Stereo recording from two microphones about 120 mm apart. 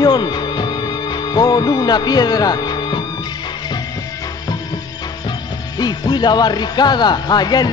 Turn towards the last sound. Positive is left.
turn(degrees=35)  # may be behind; listen again after turning